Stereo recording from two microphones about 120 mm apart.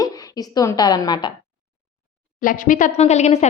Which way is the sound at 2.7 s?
90° left.